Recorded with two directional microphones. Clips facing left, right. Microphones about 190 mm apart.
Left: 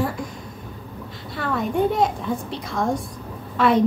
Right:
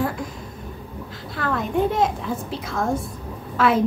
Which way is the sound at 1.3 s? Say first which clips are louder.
Even; centre (ahead or behind).